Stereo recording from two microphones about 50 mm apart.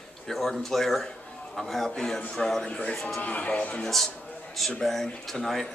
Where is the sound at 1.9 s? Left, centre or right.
Centre.